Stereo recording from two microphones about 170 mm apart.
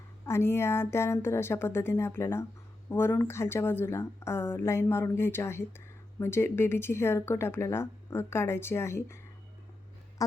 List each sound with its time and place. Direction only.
0.3 s speech: 15° left (ahead or behind)